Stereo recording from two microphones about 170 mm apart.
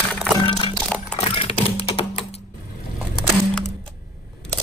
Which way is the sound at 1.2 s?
35° left (ahead or behind).